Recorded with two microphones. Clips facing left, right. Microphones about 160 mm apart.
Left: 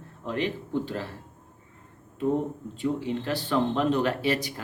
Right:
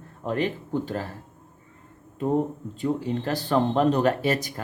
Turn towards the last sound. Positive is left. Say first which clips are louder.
# right 2 dB
turn(degrees=-45)  # may be behind; listen again after turning